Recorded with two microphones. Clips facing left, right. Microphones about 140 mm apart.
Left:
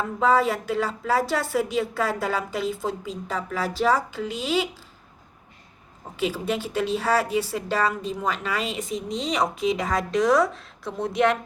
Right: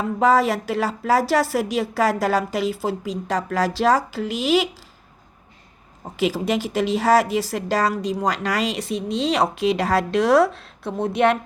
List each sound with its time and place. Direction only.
0.0 s speech: 85° right
6.4 s a woman's voice: 90° right; by 11.3 s 60° right (ahead or behind)